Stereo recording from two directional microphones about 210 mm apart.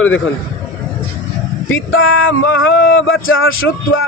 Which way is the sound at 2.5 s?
65° left (ahead or behind).